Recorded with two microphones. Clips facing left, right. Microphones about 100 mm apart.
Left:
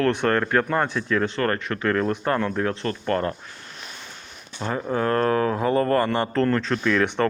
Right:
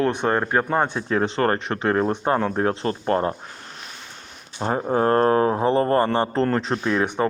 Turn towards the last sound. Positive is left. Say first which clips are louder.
# even
turn(degrees=-25)  # may be behind; listen again after turning